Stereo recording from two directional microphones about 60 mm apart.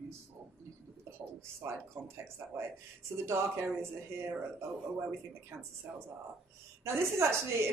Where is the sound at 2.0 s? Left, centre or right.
Right.